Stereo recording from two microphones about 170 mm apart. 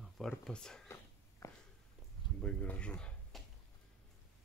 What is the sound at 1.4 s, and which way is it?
Walk, 20° left (ahead or behind).